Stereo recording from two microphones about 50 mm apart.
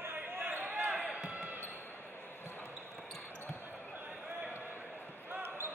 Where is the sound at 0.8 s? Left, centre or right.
Right.